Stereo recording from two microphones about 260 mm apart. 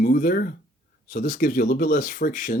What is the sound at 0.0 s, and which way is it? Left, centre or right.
Speech, left.